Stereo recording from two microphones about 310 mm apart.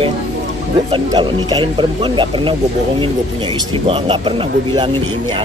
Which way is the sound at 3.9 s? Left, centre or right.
Centre.